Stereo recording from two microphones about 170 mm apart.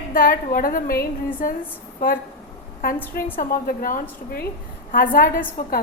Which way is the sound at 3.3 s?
55° left (ahead or behind).